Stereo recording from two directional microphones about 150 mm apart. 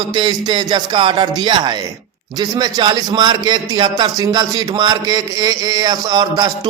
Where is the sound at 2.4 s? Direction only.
25° right (ahead or behind).